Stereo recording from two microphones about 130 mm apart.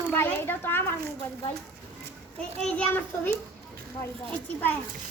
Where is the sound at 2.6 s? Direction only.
10° left (ahead or behind).